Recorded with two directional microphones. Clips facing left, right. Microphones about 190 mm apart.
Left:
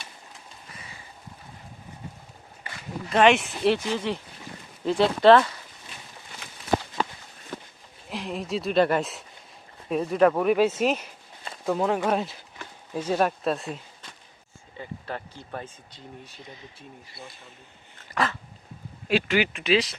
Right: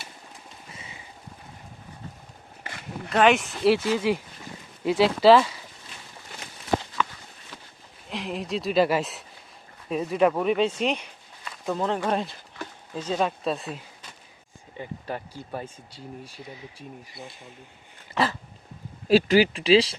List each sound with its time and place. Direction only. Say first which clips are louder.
3.1 s speech: left 1 dB; centre (ahead or behind)
7.0 s walk: even; 35° left (ahead or behind)
7.5 s livestock: left 9 dB; 50° left (ahead or behind)
8.1 s speech: even; centre (ahead or behind)
14.8 s speech: right 2 dB; 15° right (ahead or behind)
18.1 s dog: right 2 dB; 30° right (ahead or behind)
19.0 s speech: right 5 dB; 35° right (ahead or behind)